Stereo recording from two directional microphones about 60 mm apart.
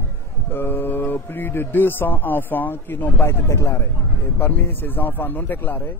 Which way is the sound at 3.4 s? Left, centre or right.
Left.